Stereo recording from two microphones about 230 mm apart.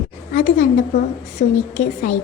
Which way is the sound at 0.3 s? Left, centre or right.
Left.